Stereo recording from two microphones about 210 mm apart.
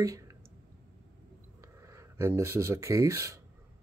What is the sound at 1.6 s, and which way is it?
Speech, 15° right (ahead or behind).